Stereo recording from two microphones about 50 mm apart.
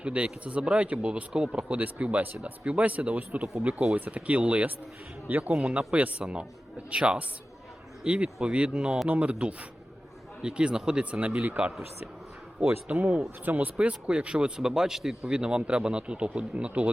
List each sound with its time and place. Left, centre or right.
0.0 s speech: right
1.7 s speech: right
6.1 s speech: centre
12.9 s speech: right
13.7 s speech: right